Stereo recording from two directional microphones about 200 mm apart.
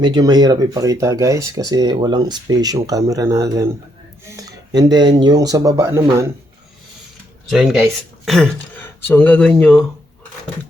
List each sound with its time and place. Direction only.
0.0 s speech: 20° right (ahead or behind)
7.5 s speech: centre (ahead or behind)